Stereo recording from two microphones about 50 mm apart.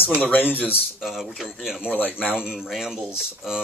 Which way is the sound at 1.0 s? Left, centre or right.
Centre.